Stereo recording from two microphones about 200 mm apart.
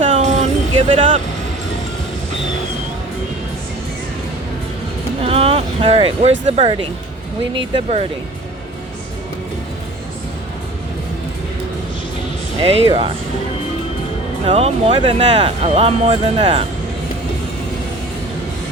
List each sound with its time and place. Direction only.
0.0 s music: 40° right (ahead or behind)
5.2 s a sound: 30° right (ahead or behind)
6.4 s speech: 35° right (ahead or behind)
12.5 s speech: 25° right (ahead or behind)
14.4 s speech: 35° right (ahead or behind)